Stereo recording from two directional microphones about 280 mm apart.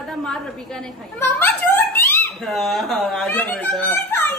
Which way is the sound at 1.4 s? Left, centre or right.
Centre.